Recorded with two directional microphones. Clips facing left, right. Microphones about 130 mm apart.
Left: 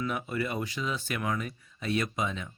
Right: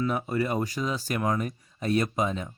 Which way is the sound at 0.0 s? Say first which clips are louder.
Right 5 dB; 35° right (ahead or behind).